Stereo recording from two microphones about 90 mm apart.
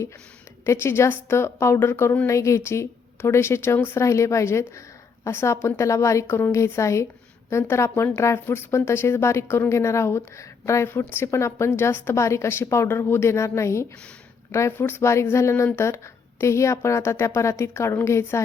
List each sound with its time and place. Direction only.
0.6 s a woman's voice: 30° left (ahead or behind)